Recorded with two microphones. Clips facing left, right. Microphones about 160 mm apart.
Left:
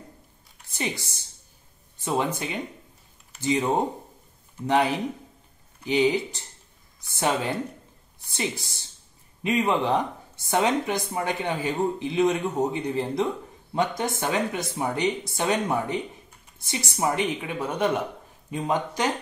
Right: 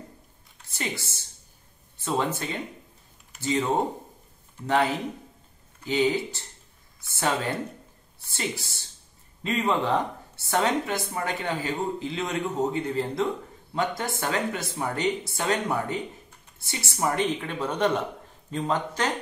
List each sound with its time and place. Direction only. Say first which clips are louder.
0.7 s a woman's voice: left 2 dB; 15° left (ahead or behind)
4.6 s a woman's voice: left 2 dB; 15° left (ahead or behind)